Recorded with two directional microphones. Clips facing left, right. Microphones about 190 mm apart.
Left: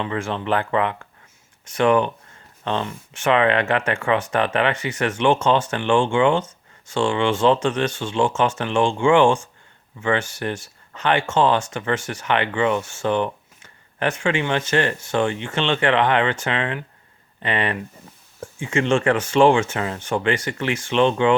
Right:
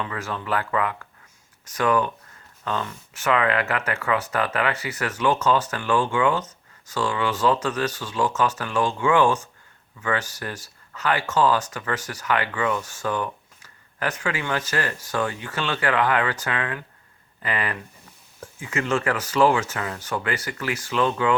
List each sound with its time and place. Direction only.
0.0 s speech: 25° left (ahead or behind)